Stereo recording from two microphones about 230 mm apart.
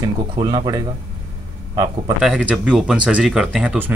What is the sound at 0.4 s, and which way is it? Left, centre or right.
Speech, centre.